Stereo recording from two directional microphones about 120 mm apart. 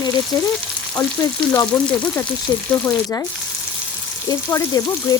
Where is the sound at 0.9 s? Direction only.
25° left (ahead or behind).